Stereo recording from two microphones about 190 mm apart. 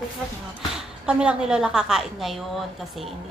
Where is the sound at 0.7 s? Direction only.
5° right (ahead or behind).